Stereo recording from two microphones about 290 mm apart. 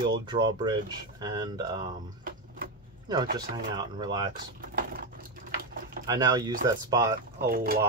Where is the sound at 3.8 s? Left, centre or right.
Centre.